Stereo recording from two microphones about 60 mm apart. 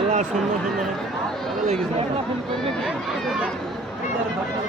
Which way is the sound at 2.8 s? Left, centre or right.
Centre.